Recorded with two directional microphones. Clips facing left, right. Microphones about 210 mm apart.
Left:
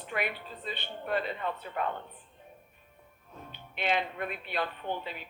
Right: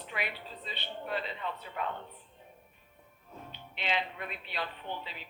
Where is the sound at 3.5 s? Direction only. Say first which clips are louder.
Left 5 dB; 50° left (ahead or behind).